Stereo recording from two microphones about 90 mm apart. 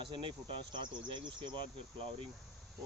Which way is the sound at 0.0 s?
65° right (ahead or behind).